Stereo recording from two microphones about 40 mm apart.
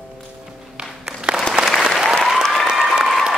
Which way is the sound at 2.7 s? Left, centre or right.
Centre.